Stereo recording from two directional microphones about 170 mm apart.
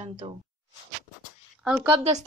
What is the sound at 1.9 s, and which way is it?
Speech, 40° right (ahead or behind).